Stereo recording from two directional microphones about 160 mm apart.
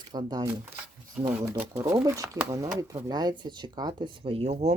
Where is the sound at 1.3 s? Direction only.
10° right (ahead or behind); by 4.7 s 40° right (ahead or behind).